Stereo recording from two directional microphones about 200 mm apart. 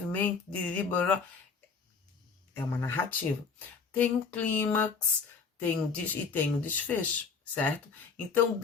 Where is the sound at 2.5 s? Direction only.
10° left (ahead or behind).